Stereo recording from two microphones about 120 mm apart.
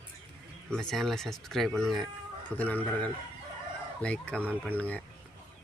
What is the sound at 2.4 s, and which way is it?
Speech, 15° left (ahead or behind).